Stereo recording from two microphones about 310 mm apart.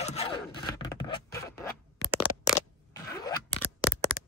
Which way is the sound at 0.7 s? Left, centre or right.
Centre.